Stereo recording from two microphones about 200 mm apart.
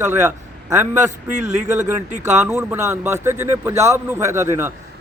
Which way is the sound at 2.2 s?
15° right (ahead or behind).